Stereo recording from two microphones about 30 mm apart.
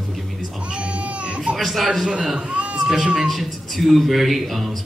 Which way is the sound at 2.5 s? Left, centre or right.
Right.